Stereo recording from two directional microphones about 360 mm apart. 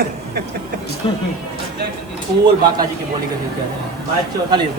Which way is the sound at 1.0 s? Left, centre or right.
Centre.